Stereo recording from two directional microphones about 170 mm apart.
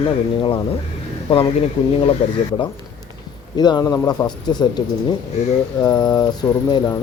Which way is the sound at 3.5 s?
25° left (ahead or behind).